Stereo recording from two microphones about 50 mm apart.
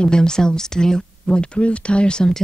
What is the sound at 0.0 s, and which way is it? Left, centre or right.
A woman's voice, centre.